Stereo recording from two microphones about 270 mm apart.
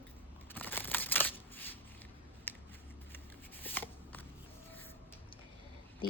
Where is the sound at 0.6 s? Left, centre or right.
Centre.